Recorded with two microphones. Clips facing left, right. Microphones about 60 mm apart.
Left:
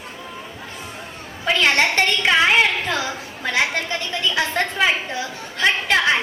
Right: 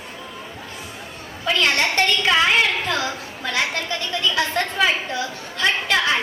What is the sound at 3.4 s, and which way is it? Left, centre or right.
A woman's voice, left.